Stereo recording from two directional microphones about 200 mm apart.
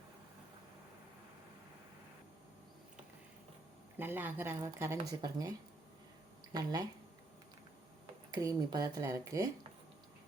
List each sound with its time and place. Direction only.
3.9 s speech: 10° right (ahead or behind)
8.3 s speech: 20° right (ahead or behind)